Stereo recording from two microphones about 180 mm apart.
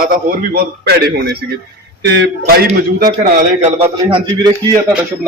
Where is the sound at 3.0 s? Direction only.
45° right (ahead or behind).